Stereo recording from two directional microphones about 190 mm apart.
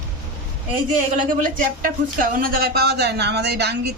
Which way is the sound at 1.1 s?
45° right (ahead or behind).